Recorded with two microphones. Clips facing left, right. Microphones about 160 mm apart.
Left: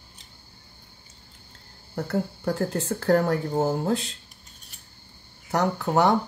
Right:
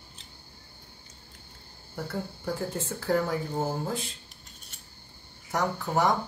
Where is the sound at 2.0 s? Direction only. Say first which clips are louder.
Left 7 dB; 70° left (ahead or behind).